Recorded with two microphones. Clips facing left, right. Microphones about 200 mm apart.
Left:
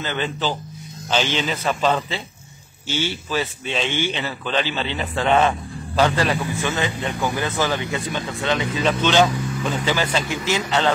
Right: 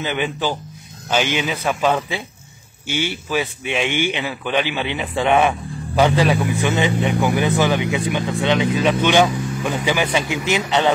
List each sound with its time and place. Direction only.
0.0 s a man's voice: 15° right (ahead or behind)